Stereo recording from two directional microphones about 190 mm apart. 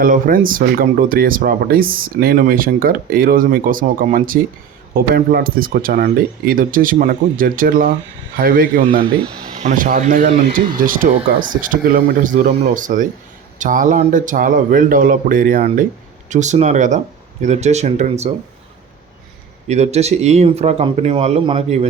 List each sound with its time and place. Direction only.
0.0 s speech: 45° right (ahead or behind)
19.6 s speech: 35° right (ahead or behind)